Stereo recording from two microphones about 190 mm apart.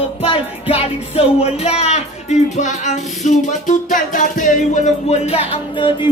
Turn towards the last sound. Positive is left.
turn(degrees=25)  # may be behind; listen again after turning